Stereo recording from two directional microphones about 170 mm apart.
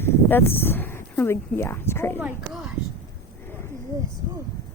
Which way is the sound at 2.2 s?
5° right (ahead or behind).